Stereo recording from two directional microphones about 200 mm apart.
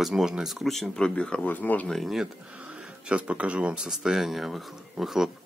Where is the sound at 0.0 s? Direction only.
Centre (ahead or behind).